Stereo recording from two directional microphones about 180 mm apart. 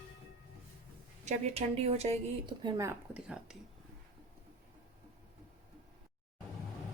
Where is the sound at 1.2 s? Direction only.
35° right (ahead or behind).